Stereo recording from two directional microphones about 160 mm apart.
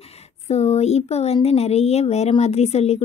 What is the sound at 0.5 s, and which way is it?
Speech, 40° left (ahead or behind).